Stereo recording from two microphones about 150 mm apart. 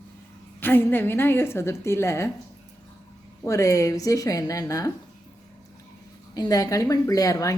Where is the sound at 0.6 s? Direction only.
15° left (ahead or behind).